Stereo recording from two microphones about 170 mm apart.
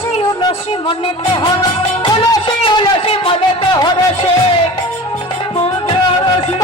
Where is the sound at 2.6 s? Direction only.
30° left (ahead or behind).